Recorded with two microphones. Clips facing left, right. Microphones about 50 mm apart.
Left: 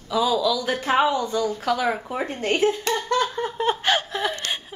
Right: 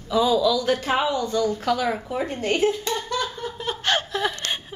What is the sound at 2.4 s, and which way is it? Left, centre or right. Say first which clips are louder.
Speech: left 1 dB; left.